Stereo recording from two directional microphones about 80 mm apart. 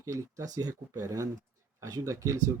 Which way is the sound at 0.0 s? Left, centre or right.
Right.